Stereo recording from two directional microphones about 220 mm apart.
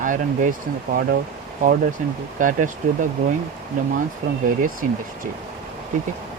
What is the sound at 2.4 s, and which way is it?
Speech, 35° right (ahead or behind).